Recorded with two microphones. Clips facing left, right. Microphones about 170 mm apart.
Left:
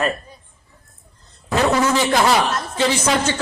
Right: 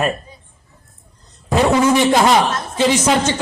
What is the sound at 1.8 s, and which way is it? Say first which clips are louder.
A man's voice: right 4 dB; 20° right (ahead or behind).